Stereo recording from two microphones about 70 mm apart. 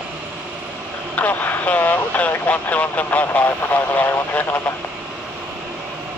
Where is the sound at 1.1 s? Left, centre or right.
Left.